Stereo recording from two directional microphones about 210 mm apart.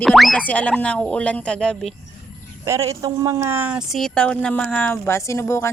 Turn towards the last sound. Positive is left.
turn(degrees=15)  # may be behind; listen again after turning